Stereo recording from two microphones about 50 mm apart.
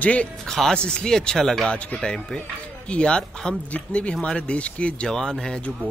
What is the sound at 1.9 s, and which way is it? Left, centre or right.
Speech, centre.